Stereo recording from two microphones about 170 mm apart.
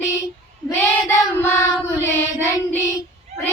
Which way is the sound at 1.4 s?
15° left (ahead or behind).